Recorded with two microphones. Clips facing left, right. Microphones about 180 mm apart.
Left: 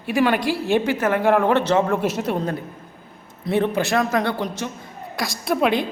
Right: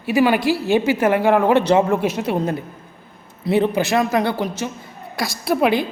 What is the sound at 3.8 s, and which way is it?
A woman's voice, 5° right (ahead or behind).